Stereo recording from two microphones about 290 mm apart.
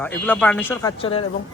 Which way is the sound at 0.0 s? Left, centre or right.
Centre.